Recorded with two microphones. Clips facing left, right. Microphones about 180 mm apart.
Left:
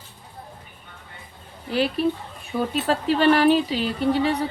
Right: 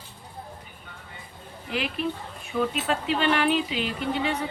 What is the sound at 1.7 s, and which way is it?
Speech, 35° left (ahead or behind).